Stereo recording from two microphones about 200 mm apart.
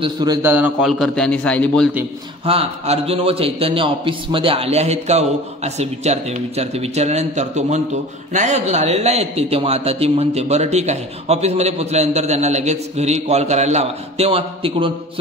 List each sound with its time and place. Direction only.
0.0 s a man's voice: 20° right (ahead or behind); by 1.9 s 5° left (ahead or behind)
2.4 s a man's voice: 30° right (ahead or behind)